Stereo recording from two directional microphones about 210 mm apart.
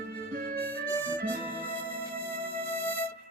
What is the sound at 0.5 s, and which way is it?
Music, 10° left (ahead or behind).